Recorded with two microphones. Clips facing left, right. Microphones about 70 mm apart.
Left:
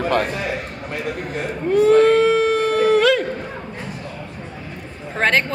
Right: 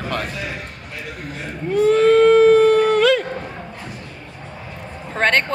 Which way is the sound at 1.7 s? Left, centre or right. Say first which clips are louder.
Left 1 dB; centre.